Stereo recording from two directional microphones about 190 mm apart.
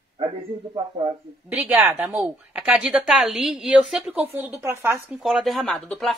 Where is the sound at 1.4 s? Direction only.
10° right (ahead or behind).